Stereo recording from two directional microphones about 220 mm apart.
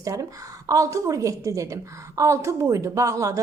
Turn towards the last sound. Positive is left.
turn(degrees=-15)  # may be behind; listen again after turning